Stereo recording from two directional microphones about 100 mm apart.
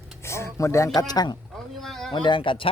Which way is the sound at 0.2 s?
25° left (ahead or behind).